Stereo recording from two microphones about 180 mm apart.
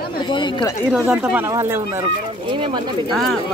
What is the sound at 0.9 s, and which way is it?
Speech, 5° right (ahead or behind).